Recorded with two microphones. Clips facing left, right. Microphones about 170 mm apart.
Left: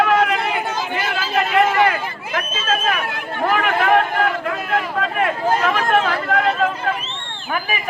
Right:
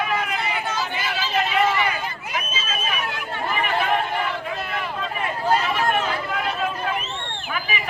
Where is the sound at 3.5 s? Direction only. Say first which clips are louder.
Left 6 dB; 90° left; by 6.5 s 70° left (ahead or behind).